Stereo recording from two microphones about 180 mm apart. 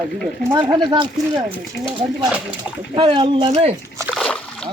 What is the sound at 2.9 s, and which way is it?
Speech, 30° right (ahead or behind).